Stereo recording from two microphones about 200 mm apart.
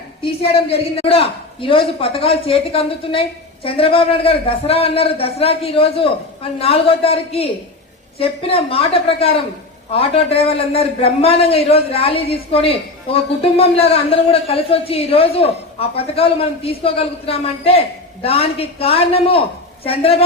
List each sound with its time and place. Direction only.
0.2 s a man's voice: 30° left (ahead or behind)